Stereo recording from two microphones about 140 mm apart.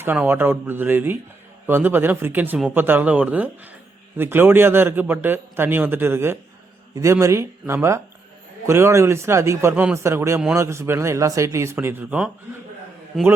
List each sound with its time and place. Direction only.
0.0 s a man's voice: 15° right (ahead or behind)
13.1 s a man's voice: centre (ahead or behind)